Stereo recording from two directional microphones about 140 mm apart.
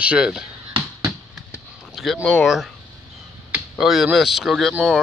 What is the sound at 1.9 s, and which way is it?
Speech, centre (ahead or behind).